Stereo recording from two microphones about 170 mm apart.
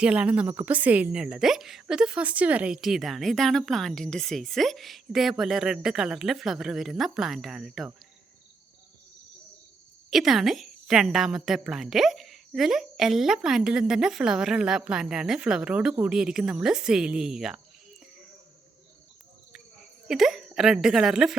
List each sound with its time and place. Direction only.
0.0 s a woman's voice: 10° right (ahead or behind)
10.1 s a woman's voice: centre (ahead or behind)
20.1 s a woman's voice: centre (ahead or behind)